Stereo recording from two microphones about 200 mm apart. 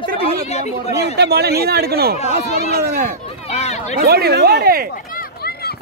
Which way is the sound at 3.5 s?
30° left (ahead or behind).